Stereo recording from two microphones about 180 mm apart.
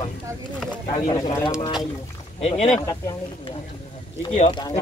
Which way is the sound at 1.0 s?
20° left (ahead or behind).